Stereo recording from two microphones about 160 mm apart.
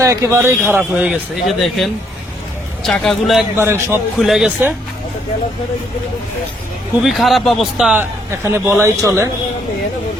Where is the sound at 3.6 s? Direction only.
15° right (ahead or behind).